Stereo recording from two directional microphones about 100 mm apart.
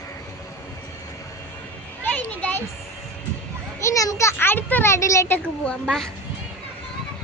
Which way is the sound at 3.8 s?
35° left (ahead or behind).